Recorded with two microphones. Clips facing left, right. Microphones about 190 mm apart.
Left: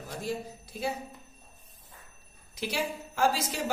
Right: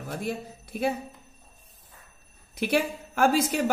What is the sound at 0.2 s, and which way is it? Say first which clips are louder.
Speech: right 2 dB; 60° right (ahead or behind).